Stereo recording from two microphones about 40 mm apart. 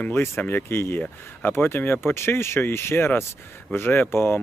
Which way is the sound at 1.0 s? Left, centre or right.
Left.